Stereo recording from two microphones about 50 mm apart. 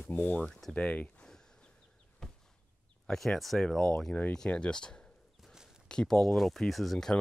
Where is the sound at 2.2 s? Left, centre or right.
Centre.